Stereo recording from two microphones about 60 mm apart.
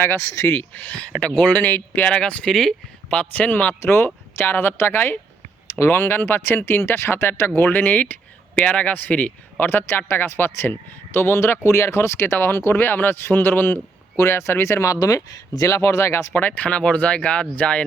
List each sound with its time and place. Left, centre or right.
0.0 s speech: left
0.7 s speech: left
2.5 s speech: centre
3.1 s speech: left
3.8 s speech: left
9.6 s speech: left
14.2 s speech: left
16.4 s speech: left